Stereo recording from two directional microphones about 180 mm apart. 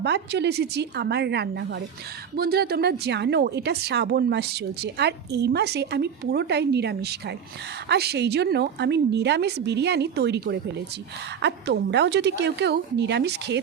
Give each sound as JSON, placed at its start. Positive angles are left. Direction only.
{"t": 0.0, "sound": "speech", "side_deg": -70}